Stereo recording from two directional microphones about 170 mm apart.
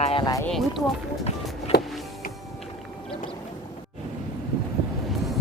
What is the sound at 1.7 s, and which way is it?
Music, 70° left (ahead or behind).